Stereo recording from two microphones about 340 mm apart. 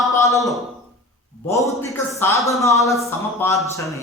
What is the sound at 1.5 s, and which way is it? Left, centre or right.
A man's voice, centre.